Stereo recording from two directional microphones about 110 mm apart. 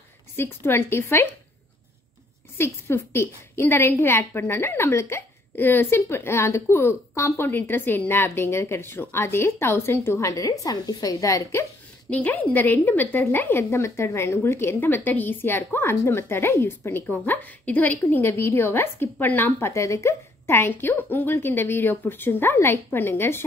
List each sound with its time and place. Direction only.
0.4 s a woman's voice: 20° left (ahead or behind)
2.5 s a woman's voice: 20° left (ahead or behind)
12.1 s a woman's voice: 15° left (ahead or behind)